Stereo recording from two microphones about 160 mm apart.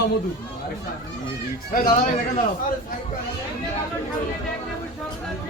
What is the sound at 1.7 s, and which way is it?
Speech, 60° left (ahead or behind).